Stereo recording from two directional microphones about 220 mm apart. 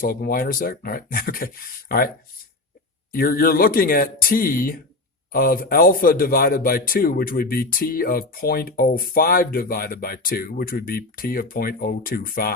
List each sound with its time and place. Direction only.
0.0 s a man's voice: 45° left (ahead or behind)
3.1 s a man's voice: 40° left (ahead or behind)